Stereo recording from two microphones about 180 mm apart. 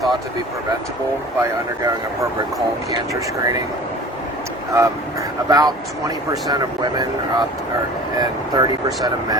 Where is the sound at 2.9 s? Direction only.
20° right (ahead or behind).